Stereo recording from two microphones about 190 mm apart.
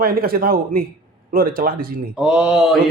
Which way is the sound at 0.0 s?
50° right (ahead or behind).